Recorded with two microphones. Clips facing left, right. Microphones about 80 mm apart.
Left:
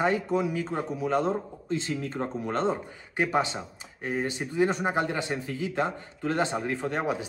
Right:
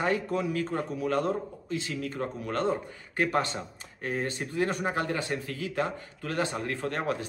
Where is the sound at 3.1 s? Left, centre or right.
Centre; by 6.6 s left.